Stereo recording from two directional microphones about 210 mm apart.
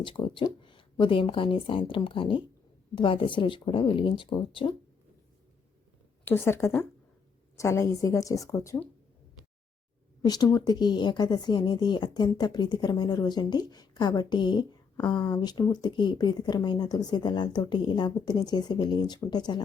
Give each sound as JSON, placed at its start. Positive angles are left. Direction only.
{"t": 0.0, "sound": "a woman's voice", "side_deg": 25}
{"t": 6.2, "sound": "a woman's voice", "side_deg": 10}
{"t": 10.2, "sound": "a woman's voice", "side_deg": 20}